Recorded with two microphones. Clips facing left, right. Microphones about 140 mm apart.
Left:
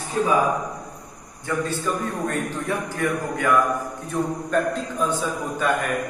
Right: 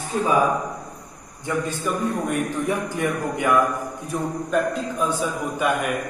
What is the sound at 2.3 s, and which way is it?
A man's voice, 15° right (ahead or behind).